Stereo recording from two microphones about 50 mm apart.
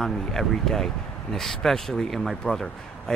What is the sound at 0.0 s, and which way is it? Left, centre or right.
Speech, centre.